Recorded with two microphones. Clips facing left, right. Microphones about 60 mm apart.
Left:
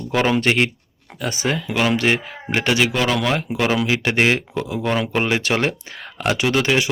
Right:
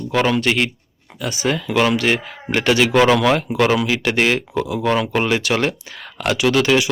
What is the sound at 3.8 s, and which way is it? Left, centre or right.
Speech, centre.